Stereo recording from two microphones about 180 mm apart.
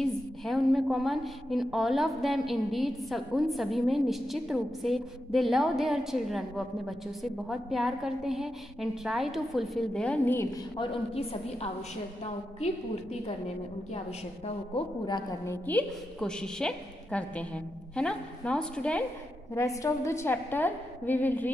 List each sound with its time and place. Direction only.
0.0 s a woman's voice: centre (ahead or behind)
10.8 s a woman's voice: 30° left (ahead or behind)
15.0 s a woman's voice: 20° left (ahead or behind)
19.5 s a woman's voice: 15° left (ahead or behind)